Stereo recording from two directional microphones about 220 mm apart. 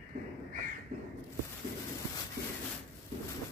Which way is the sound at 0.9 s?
35° right (ahead or behind).